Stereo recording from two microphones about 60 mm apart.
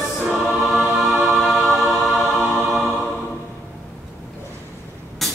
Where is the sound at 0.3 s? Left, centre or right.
Centre.